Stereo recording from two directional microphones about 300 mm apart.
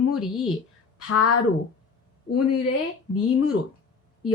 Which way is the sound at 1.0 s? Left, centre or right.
Left.